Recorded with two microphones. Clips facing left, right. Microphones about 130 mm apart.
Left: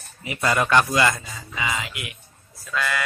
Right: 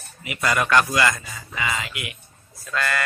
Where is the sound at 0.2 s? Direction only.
30° left (ahead or behind).